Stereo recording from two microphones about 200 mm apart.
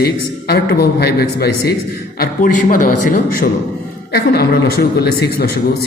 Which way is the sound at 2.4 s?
45° left (ahead or behind).